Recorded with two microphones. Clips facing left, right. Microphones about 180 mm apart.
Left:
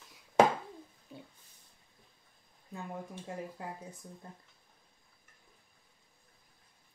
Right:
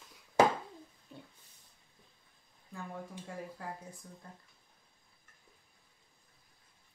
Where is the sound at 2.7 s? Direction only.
20° left (ahead or behind).